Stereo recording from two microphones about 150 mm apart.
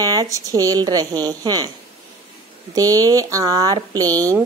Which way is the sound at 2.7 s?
25° right (ahead or behind).